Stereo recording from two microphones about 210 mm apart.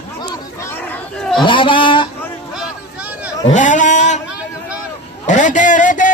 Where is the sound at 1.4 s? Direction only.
25° left (ahead or behind).